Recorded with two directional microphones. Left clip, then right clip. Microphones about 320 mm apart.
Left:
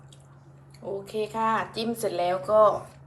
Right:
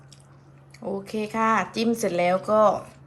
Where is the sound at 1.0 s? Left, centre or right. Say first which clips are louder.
Even; right.